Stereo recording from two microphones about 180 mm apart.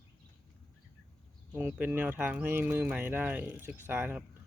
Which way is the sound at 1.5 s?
10° right (ahead or behind).